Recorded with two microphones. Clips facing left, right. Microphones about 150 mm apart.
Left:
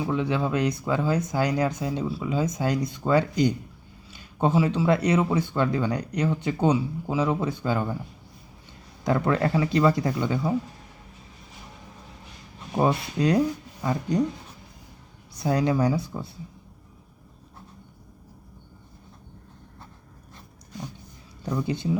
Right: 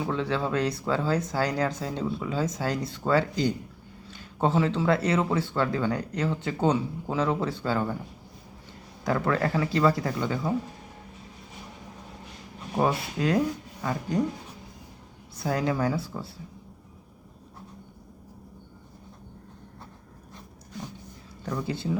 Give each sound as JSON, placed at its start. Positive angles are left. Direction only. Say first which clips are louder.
{"t": 0.0, "sound": "a man's voice", "louder": "left 2 dB", "side_deg": 15}
{"t": 9.0, "sound": "speech", "louder": "left 2 dB", "side_deg": 20}
{"t": 12.8, "sound": "speech", "louder": "left 3 dB", "side_deg": 20}
{"t": 15.4, "sound": "speech", "louder": "left 3 dB", "side_deg": 20}
{"t": 21.4, "sound": "speech", "louder": "left 3 dB", "side_deg": 20}